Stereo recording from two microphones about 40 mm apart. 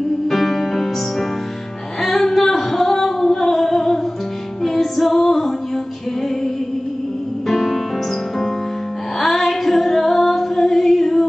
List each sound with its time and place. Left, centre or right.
0.3 s music: centre
2.0 s singing: centre
4.6 s female singing: centre
7.4 s music: centre
9.2 s female singing: centre